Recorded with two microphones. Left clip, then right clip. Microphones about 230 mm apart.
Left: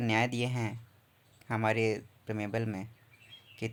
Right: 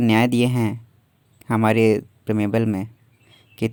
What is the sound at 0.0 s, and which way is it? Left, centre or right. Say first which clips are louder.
Speech: right 12 dB; right.